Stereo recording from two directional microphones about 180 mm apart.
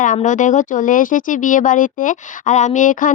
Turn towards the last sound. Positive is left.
turn(degrees=45)  # may be behind; listen again after turning